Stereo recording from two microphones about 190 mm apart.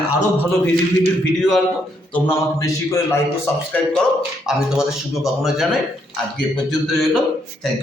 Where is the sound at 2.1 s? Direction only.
15° left (ahead or behind).